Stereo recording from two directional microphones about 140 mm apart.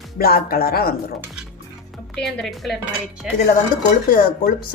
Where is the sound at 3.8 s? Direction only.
80° left.